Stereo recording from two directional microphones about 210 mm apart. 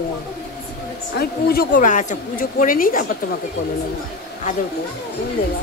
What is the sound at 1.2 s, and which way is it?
A woman's voice, 45° left (ahead or behind).